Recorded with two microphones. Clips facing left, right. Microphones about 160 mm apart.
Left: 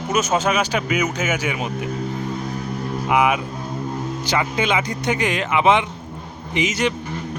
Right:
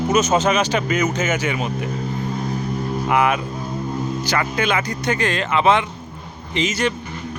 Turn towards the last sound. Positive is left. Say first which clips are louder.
# even
turn(degrees=15)  # may be behind; listen again after turning